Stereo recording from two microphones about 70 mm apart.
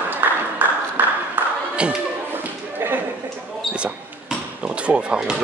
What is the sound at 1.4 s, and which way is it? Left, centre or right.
Clapping, right.